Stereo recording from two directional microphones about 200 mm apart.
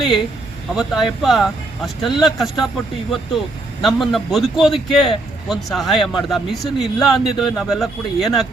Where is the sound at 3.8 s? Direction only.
Centre (ahead or behind).